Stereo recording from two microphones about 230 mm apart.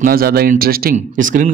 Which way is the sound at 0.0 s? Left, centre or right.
Right.